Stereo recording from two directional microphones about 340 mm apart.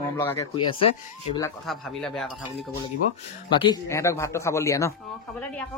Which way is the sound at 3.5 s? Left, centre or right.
Centre.